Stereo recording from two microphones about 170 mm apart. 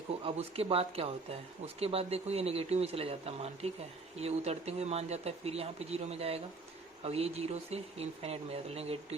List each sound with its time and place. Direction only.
0.3 s speech: 35° right (ahead or behind)